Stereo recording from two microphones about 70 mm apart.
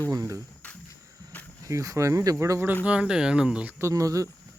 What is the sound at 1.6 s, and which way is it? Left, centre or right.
Speech, right.